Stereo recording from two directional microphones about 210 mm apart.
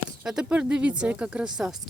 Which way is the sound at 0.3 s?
5° right (ahead or behind).